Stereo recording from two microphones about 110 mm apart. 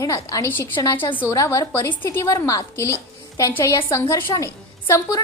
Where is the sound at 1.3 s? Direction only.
30° left (ahead or behind).